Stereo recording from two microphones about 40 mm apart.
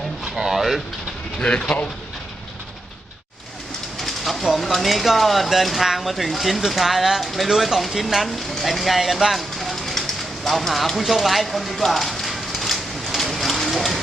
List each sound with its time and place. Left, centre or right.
0.3 s speech: centre
1.4 s speech: left
4.0 s train: centre
4.6 s speech: centre
11.9 s rain: centre